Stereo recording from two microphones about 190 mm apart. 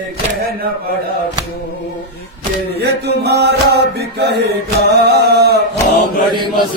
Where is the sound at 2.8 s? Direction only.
60° right (ahead or behind).